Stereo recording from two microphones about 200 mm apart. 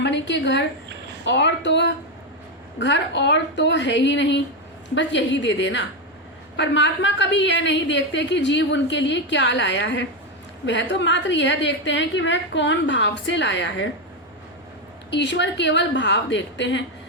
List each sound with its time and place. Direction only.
0.0 s a woman's voice: 60° left (ahead or behind)
15.1 s a woman's voice: 60° left (ahead or behind)